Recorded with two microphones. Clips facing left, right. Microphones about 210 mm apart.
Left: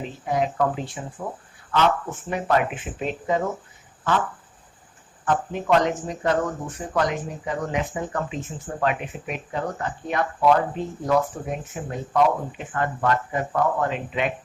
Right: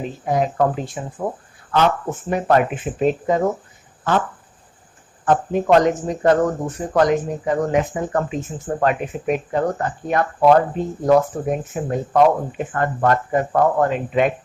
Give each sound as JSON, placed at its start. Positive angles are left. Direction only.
{"t": 0.3, "sound": "speech", "side_deg": -45}
{"t": 5.2, "sound": "speech", "side_deg": -40}